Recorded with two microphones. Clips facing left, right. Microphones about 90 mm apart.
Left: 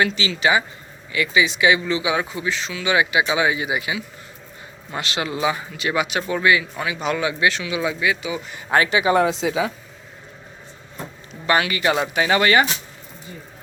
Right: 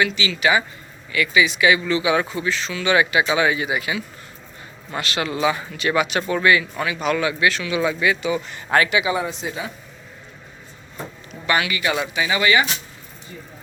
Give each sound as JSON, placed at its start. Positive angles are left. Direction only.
{"t": 0.0, "sound": "speech", "side_deg": 30}
{"t": 8.7, "sound": "a man's voice", "side_deg": 30}
{"t": 9.1, "sound": "speech", "side_deg": 85}
{"t": 11.4, "sound": "a man's voice", "side_deg": 35}
{"t": 12.1, "sound": "speech", "side_deg": 50}